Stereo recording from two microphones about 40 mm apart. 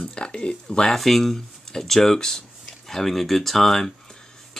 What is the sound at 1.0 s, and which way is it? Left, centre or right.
Speech, centre.